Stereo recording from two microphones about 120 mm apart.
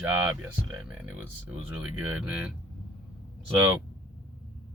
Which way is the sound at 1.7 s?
10° right (ahead or behind).